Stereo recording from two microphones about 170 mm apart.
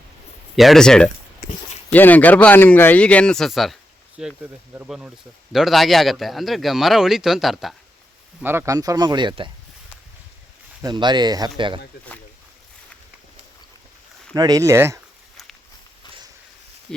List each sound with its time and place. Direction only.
0.5 s speech: centre (ahead or behind)
8.4 s speech: 15° right (ahead or behind); by 9.5 s 30° right (ahead or behind)
10.8 s speech: 25° right (ahead or behind)
14.3 s speech: 20° right (ahead or behind)